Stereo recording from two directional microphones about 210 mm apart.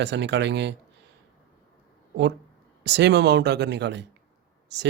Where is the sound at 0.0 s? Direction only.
55° right (ahead or behind).